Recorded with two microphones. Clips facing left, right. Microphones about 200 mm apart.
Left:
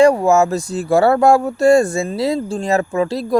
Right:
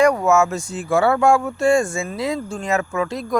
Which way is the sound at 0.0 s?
30° left (ahead or behind).